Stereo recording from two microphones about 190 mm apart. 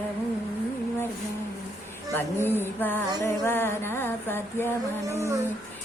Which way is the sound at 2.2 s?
10° left (ahead or behind).